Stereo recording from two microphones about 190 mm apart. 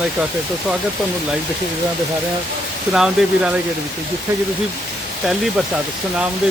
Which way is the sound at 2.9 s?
5° right (ahead or behind).